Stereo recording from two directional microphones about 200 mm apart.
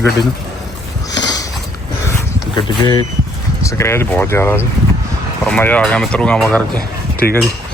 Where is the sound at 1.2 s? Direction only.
20° left (ahead or behind).